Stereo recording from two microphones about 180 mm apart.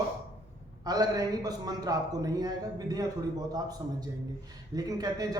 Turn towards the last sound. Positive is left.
turn(degrees=-20)  # may be behind; listen again after turning